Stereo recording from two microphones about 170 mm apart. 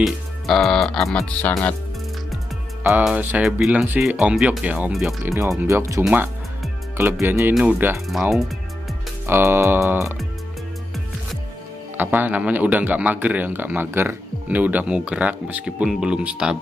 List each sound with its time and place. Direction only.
0.0 s speech: centre (ahead or behind)
3.0 s speech: 5° right (ahead or behind)
5.2 s speech: 15° right (ahead or behind); by 8.5 s centre (ahead or behind)
9.2 s speech: 15° right (ahead or behind)
12.0 s speech: 10° right (ahead or behind)